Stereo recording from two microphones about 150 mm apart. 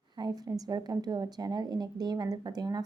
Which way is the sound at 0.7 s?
25° right (ahead or behind).